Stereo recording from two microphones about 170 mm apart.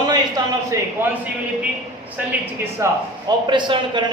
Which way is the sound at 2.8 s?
25° right (ahead or behind).